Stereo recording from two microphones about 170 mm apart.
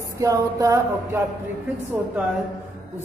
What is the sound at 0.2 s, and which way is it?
A man's voice, 20° right (ahead or behind).